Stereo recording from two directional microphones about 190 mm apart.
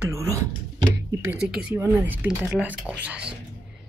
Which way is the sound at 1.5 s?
10° right (ahead or behind).